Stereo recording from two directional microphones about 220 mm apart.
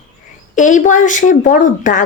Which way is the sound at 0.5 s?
35° left (ahead or behind).